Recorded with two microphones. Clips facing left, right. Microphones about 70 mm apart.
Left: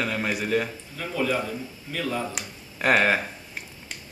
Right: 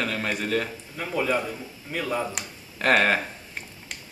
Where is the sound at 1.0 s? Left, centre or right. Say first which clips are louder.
Right 1 dB; centre.